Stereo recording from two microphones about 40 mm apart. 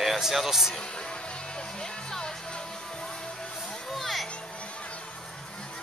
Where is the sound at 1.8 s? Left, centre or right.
Centre.